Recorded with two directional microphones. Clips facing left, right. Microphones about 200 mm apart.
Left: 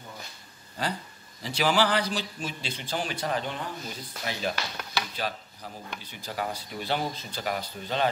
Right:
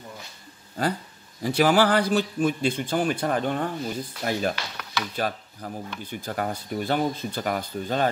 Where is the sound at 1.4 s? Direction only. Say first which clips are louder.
Right 5 dB; 50° right (ahead or behind).